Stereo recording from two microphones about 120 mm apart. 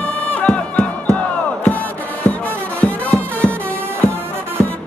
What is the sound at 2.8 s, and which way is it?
Music, 10° left (ahead or behind).